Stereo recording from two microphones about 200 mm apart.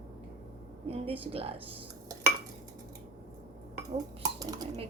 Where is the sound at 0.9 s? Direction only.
30° right (ahead or behind).